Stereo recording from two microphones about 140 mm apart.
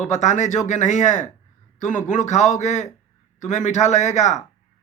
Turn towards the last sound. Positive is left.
turn(degrees=55)  # may be behind; listen again after turning